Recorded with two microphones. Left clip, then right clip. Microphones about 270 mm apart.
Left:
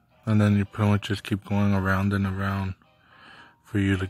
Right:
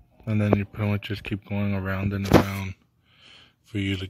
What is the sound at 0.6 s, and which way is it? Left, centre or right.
Speech, left.